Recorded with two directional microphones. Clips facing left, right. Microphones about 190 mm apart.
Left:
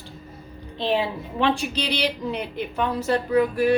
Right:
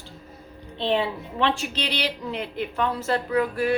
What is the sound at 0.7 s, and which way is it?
A woman's voice, 10° left (ahead or behind).